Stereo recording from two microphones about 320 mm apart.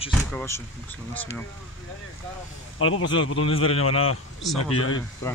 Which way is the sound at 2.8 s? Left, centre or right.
Left.